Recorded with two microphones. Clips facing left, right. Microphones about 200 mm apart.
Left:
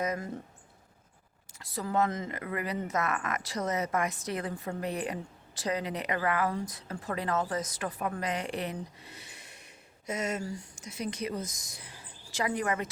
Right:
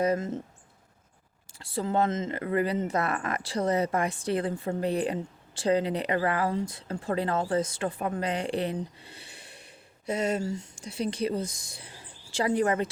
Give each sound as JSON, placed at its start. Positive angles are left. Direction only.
{"t": 0.0, "sound": "speech", "side_deg": -25}
{"t": 1.5, "sound": "speech", "side_deg": -30}